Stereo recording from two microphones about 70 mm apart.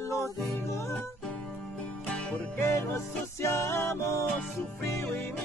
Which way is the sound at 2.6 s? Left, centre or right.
Left.